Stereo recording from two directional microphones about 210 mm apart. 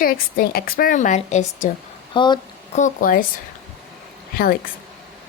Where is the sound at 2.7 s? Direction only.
40° left (ahead or behind).